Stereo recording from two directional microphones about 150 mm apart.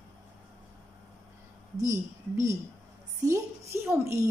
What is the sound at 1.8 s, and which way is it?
A woman's voice, 20° right (ahead or behind).